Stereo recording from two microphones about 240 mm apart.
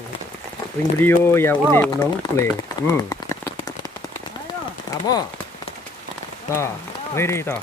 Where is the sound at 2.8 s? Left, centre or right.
Centre.